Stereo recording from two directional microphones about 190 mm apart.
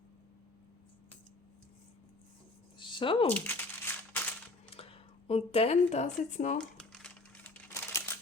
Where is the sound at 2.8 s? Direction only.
25° left (ahead or behind).